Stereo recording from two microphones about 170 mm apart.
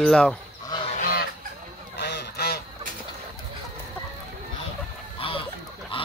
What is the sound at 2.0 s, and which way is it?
Goose, 70° left (ahead or behind).